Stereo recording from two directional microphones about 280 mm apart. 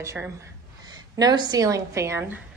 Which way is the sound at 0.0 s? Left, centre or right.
Centre.